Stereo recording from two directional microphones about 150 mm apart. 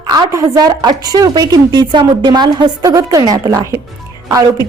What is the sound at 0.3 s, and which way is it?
A woman's voice, 25° right (ahead or behind).